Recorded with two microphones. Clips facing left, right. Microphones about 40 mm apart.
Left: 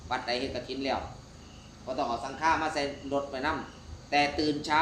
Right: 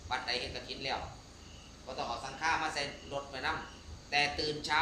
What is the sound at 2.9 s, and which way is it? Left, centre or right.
A man's voice, centre.